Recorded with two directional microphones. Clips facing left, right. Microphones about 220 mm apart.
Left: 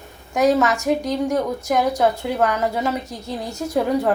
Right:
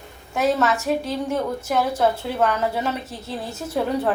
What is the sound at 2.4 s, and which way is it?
Speech, 10° left (ahead or behind).